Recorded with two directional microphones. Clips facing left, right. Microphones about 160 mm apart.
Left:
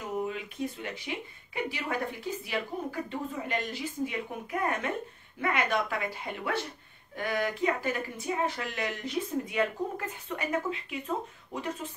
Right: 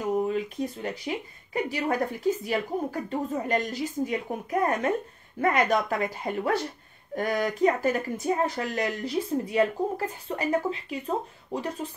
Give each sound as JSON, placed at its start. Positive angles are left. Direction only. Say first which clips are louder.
{"t": 0.2, "sound": "speech", "louder": "right 6 dB", "side_deg": -40}